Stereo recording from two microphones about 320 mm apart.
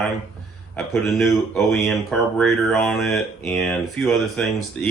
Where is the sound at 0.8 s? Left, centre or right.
Centre.